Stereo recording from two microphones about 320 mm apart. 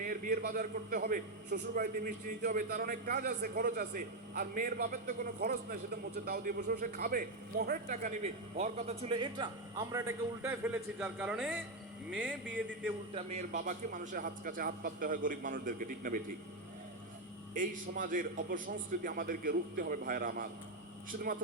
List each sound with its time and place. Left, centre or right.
0.0 s a man's voice: right; by 12.4 s centre
13.1 s a man's voice: right
17.5 s a man's voice: right